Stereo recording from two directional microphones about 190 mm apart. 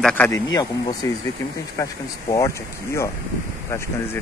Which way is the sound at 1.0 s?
15° left (ahead or behind).